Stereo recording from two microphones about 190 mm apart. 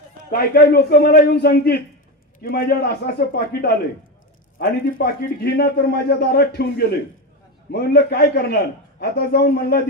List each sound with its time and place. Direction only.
0.4 s a man's voice: 55° left (ahead or behind)